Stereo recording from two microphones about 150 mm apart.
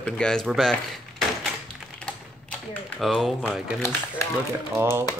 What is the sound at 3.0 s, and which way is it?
Speech, centre (ahead or behind).